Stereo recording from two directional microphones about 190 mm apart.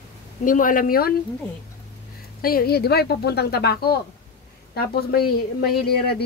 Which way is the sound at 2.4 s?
55° left (ahead or behind).